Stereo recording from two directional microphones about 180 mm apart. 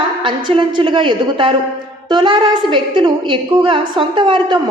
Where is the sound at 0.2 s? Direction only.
25° right (ahead or behind).